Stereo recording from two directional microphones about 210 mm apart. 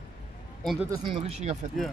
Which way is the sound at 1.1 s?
30° right (ahead or behind).